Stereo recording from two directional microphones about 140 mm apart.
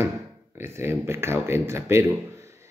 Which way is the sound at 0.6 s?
15° right (ahead or behind).